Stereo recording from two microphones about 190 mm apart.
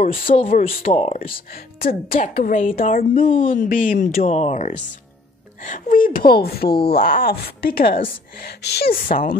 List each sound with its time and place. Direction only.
0.0 s a woman's voice: 45° left (ahead or behind); by 1.4 s 30° left (ahead or behind)
1.5 s a woman's voice: 50° left (ahead or behind)
3.2 s a woman's voice: 30° left (ahead or behind)
3.5 s a woman's voice: 45° left (ahead or behind)
4.2 s a woman's voice: 35° left (ahead or behind); by 9.4 s 50° left (ahead or behind)